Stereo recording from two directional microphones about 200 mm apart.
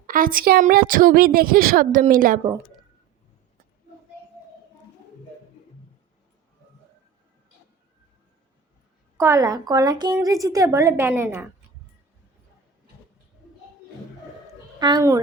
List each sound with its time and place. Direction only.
0.1 s a woman's voice: 45° right (ahead or behind)
9.1 s a woman's voice: 15° right (ahead or behind)
14.8 s a woman's voice: 20° right (ahead or behind)